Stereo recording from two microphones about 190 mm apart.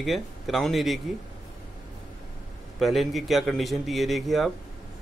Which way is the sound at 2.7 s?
Centre (ahead or behind).